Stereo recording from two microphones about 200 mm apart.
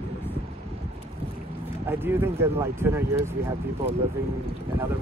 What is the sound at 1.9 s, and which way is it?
Speech, 10° right (ahead or behind).